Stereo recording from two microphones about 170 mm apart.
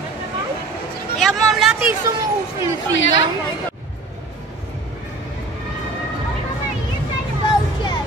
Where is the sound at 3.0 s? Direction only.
90° left.